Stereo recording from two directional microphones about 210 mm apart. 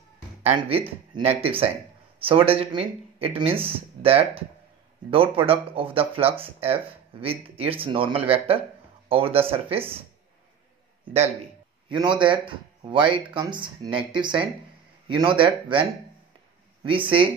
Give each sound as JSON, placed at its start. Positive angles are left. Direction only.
{"t": 0.4, "sound": "speech", "side_deg": -30}
{"t": 11.9, "sound": "speech", "side_deg": -20}
{"t": 16.8, "sound": "speech", "side_deg": -25}